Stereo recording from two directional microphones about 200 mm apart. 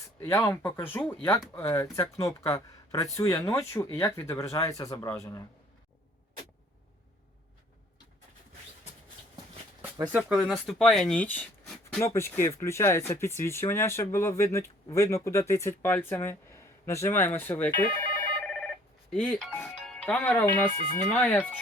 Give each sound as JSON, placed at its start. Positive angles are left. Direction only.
{"t": 0.2, "sound": "speech", "side_deg": 15}
{"t": 10.1, "sound": "speech", "side_deg": -5}
{"t": 18.4, "sound": "telephone bell ringing", "side_deg": 5}
{"t": 19.1, "sound": "speech", "side_deg": 5}